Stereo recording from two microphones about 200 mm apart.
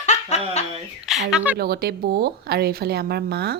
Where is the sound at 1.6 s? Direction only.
50° right (ahead or behind).